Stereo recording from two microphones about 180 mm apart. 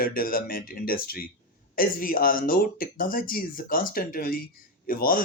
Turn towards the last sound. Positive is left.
turn(degrees=50)  # may be behind; listen again after turning